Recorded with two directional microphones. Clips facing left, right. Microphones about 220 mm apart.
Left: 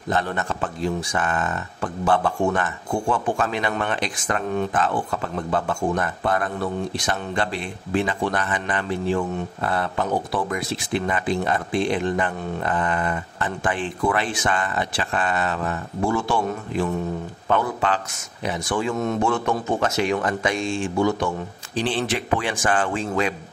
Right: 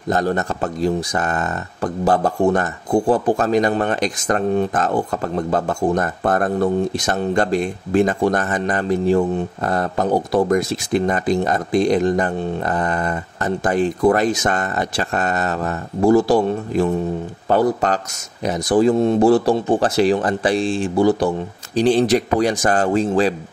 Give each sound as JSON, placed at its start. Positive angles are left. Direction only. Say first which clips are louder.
{"t": 0.1, "sound": "speech", "louder": "right 5 dB", "side_deg": -40}